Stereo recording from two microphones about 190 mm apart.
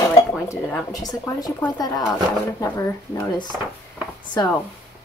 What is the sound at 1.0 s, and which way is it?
A woman's voice, 20° left (ahead or behind).